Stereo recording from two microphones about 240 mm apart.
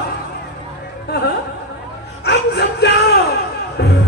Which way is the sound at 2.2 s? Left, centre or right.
Left.